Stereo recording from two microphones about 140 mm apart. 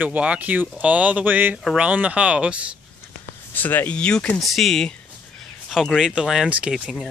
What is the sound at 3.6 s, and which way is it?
Speech, 15° left (ahead or behind).